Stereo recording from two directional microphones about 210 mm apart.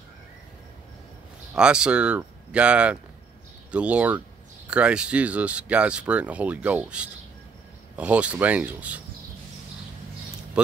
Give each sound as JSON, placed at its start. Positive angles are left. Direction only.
{"t": 1.5, "sound": "speech", "side_deg": -5}